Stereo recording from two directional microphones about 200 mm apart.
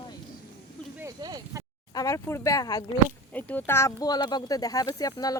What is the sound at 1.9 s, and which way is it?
Speech, 15° left (ahead or behind).